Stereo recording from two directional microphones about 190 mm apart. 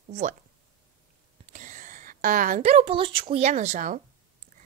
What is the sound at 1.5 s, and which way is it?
Speech, 40° right (ahead or behind).